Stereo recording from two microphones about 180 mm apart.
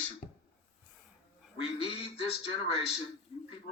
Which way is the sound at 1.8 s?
30° left (ahead or behind).